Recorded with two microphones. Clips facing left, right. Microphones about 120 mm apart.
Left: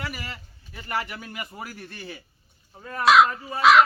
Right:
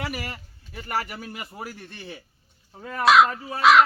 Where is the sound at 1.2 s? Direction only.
Centre (ahead or behind).